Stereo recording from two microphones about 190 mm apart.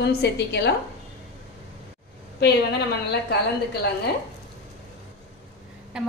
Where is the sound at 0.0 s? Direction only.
60° left (ahead or behind).